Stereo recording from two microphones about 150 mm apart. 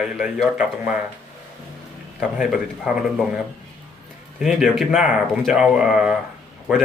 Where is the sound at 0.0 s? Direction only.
Centre (ahead or behind).